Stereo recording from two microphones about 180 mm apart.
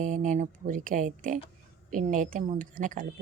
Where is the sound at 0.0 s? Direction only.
45° right (ahead or behind).